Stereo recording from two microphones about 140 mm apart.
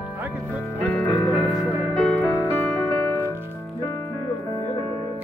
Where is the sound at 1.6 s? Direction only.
10° right (ahead or behind).